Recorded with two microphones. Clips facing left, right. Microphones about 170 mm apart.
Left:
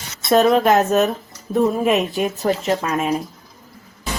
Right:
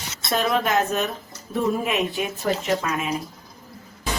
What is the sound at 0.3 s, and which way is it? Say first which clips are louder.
A woman's voice: left 9 dB; 45° left (ahead or behind).